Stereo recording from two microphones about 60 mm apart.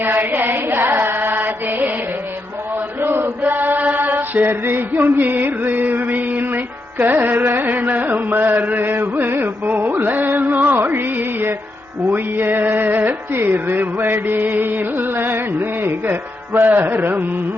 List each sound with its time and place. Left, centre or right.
0.0 s music: right
3.0 s chant: right
7.0 s music: right